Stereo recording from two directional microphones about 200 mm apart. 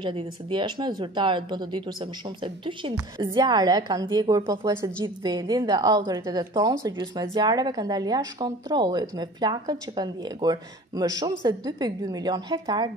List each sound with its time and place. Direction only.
0.0 s a woman's voice: 25° right (ahead or behind)